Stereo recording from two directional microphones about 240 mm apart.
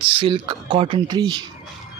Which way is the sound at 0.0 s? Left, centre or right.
Right.